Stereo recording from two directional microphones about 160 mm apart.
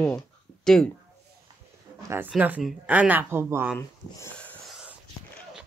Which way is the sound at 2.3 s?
10° right (ahead or behind).